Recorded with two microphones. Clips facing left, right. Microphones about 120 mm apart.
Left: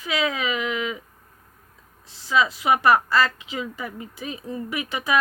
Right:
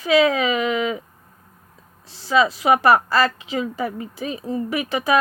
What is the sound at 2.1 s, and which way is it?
Speech, 35° right (ahead or behind).